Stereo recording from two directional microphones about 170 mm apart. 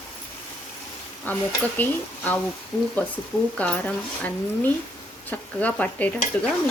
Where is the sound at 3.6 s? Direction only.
5° left (ahead or behind).